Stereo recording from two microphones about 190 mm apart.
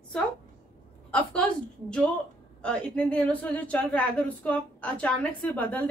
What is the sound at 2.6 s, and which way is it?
A woman's voice, 5° left (ahead or behind).